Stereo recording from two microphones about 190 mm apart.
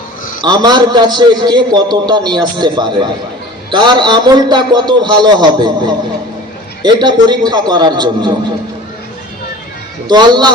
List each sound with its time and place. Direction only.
0.4 s a man's voice: 20° right (ahead or behind)
6.8 s a man's voice: 25° right (ahead or behind)
10.1 s a man's voice: 20° right (ahead or behind)